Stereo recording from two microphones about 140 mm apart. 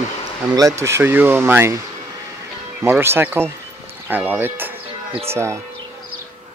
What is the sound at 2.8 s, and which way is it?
Speech, 15° right (ahead or behind).